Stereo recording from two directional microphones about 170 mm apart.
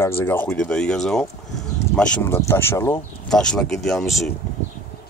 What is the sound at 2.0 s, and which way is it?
Speech, 15° left (ahead or behind).